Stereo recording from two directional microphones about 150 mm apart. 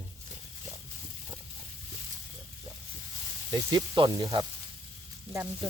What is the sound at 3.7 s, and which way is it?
Speech, 30° right (ahead or behind).